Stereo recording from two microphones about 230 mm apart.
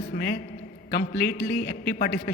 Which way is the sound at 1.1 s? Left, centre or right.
Centre.